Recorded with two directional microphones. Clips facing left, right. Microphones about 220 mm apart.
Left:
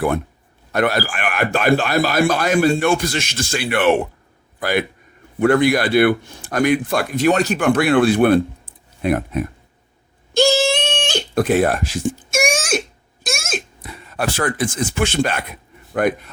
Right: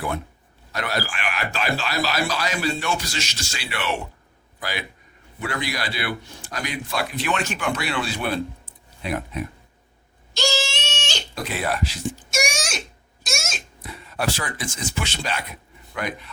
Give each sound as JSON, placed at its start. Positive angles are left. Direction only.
{"t": 0.7, "sound": "speech", "side_deg": 55}
{"t": 10.3, "sound": "a sound", "side_deg": 55}
{"t": 15.9, "sound": "speech", "side_deg": 50}